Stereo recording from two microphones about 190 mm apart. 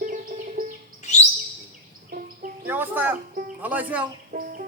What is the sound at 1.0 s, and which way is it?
Chirp, 40° left (ahead or behind).